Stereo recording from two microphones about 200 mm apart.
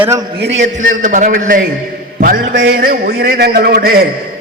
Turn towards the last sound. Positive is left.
turn(degrees=-50)  # may be behind; listen again after turning